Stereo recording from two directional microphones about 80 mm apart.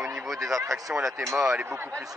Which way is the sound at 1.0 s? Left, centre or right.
Right.